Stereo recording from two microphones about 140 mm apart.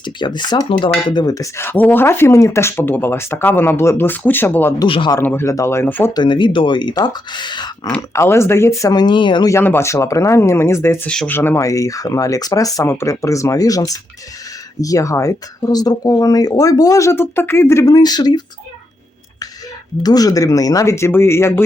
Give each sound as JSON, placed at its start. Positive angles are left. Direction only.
{"t": 0.0, "sound": "speech", "side_deg": 35}
{"t": 4.8, "sound": "speech", "side_deg": 35}
{"t": 5.2, "sound": "speech", "side_deg": 15}
{"t": 6.1, "sound": "speech", "side_deg": 35}
{"t": 8.1, "sound": "speech", "side_deg": 20}
{"t": 9.5, "sound": "speech", "side_deg": 15}
{"t": 11.1, "sound": "speech", "side_deg": 5}
{"t": 11.3, "sound": "speech", "side_deg": 20}
{"t": 20.0, "sound": "speech", "side_deg": 30}